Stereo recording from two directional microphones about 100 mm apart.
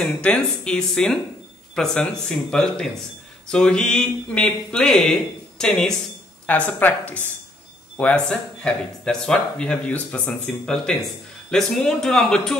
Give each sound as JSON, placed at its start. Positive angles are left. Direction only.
{"t": 0.0, "sound": "speech", "side_deg": 10}